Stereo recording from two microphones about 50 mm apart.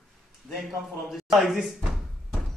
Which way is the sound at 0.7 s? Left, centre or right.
Centre.